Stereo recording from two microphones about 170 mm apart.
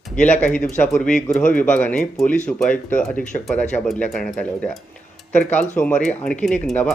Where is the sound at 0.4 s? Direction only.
5° left (ahead or behind).